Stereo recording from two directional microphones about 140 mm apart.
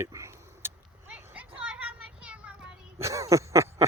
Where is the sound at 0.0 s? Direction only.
20° right (ahead or behind).